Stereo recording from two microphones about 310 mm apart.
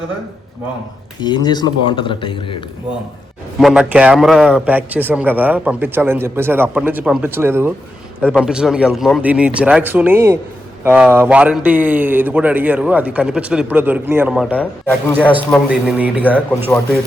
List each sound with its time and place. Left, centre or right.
1.2 s speech: centre
3.6 s a man's voice: centre